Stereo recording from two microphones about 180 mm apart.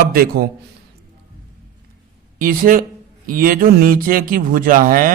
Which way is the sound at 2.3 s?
50° right (ahead or behind).